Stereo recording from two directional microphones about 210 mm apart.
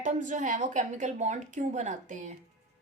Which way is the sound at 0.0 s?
35° right (ahead or behind).